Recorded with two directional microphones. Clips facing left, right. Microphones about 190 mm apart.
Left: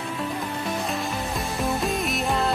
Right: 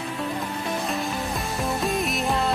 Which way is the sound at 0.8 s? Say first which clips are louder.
Right 1 dB; centre (ahead or behind).